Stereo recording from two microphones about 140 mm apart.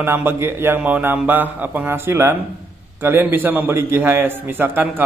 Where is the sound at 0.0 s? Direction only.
15° right (ahead or behind).